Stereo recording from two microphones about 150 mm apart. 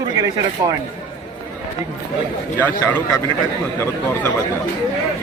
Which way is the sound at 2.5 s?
15° left (ahead or behind).